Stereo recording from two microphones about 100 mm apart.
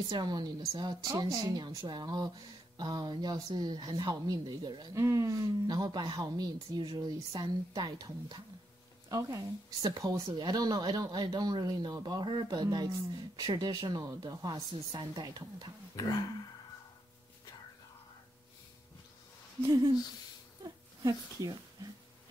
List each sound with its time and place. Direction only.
0.1 s a woman's voice: 45° right (ahead or behind)
4.9 s a woman's voice: 30° right (ahead or behind)
19.6 s a woman's voice: 35° right (ahead or behind)
21.0 s a woman's voice: 35° right (ahead or behind)